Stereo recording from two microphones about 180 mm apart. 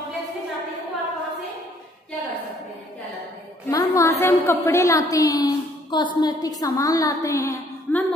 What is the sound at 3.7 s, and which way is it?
A woman's voice, 15° left (ahead or behind).